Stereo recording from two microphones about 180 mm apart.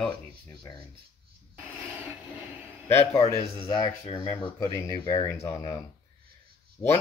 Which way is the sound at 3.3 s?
25° left (ahead or behind).